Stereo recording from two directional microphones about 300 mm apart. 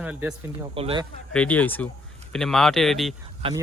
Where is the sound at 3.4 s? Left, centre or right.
Centre.